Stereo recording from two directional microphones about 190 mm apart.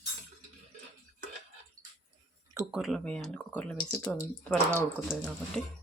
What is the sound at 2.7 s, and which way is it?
Speech, centre (ahead or behind).